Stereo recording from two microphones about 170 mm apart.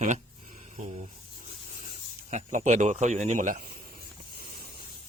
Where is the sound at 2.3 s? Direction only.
45° right (ahead or behind).